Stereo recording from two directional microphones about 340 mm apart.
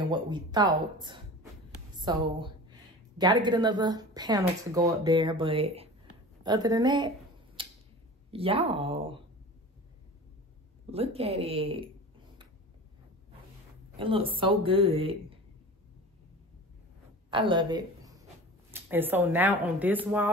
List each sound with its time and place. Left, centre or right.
0.0 s a woman's voice: centre
7.6 s tick-tock: centre
8.3 s a woman's voice: centre
10.9 s a woman's voice: centre
13.9 s a woman's voice: centre
17.3 s a woman's voice: centre